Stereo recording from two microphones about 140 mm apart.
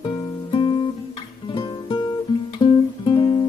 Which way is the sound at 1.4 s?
35° left (ahead or behind).